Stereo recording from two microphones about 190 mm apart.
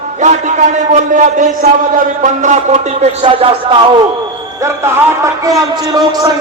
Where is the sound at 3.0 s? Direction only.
30° right (ahead or behind).